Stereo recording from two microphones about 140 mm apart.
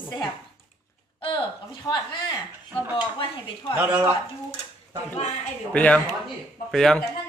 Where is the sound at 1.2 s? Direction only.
35° left (ahead or behind).